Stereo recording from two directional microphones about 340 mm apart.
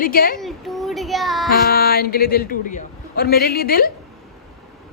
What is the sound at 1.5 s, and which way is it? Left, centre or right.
A man's voice, left.